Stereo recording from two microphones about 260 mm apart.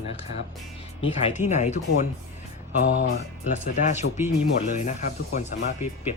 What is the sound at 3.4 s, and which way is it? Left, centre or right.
Speech, left.